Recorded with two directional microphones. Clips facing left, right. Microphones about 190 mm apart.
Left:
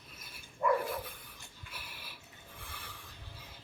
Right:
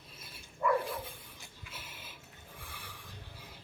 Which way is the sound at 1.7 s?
25° right (ahead or behind).